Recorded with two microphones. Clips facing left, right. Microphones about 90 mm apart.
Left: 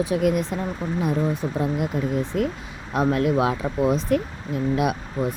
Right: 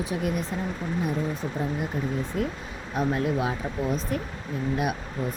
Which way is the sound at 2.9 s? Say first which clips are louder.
Left 5 dB; 75° left (ahead or behind).